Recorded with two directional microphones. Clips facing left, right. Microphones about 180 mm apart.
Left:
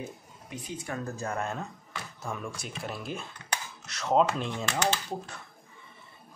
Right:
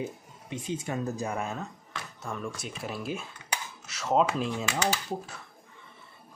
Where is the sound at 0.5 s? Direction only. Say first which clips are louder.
Right 4 dB; 25° right (ahead or behind).